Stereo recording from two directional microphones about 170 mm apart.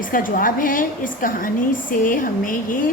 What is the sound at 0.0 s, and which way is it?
A woman's voice, 55° left (ahead or behind).